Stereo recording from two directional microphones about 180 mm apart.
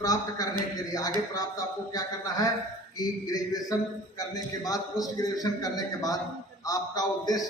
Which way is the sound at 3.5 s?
20° left (ahead or behind).